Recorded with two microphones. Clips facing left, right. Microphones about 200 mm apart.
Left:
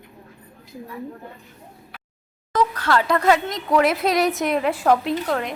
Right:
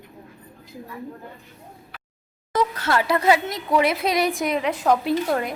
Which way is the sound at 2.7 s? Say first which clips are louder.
Left 2 dB; 25° right (ahead or behind).